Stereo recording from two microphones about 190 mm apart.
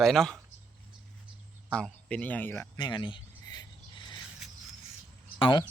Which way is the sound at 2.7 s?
25° left (ahead or behind).